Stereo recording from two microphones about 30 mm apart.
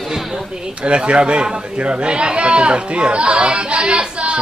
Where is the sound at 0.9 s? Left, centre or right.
Right.